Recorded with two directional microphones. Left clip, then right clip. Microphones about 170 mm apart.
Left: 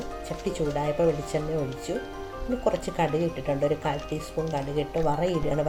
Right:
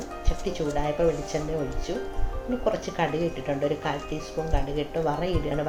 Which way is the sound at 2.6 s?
45° left (ahead or behind).